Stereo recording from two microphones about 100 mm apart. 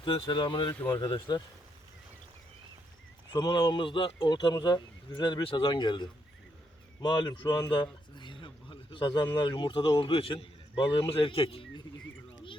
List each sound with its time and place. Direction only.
0.0 s a man's voice: 55° left (ahead or behind)
0.7 s speech: 20° left (ahead or behind)
0.9 s speech: 50° left (ahead or behind)
3.3 s speech: 45° left (ahead or behind)
7.0 s a sound: 45° left (ahead or behind)
9.4 s a man's voice: 50° left (ahead or behind)